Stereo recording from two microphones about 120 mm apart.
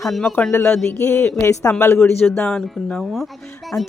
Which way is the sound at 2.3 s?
5° left (ahead or behind).